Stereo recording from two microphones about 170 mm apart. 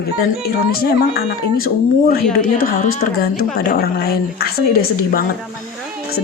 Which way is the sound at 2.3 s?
60° left (ahead or behind).